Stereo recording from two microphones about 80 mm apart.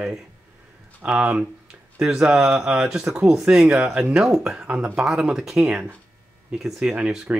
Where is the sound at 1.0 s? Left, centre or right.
Centre.